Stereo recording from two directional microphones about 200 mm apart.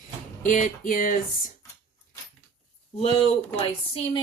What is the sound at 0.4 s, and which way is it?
Music, 40° left (ahead or behind).